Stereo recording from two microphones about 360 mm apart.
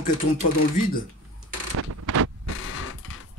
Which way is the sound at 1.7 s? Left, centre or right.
Right.